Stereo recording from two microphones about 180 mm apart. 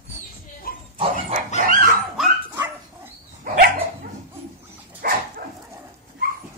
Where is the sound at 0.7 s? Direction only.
55° left (ahead or behind).